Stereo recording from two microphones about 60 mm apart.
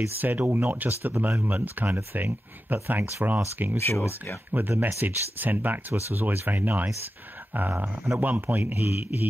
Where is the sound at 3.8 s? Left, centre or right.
Left.